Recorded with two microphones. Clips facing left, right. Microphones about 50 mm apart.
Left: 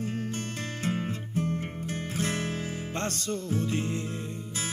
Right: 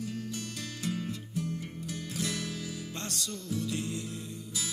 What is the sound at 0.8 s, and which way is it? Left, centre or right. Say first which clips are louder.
Music: left 3 dB; left.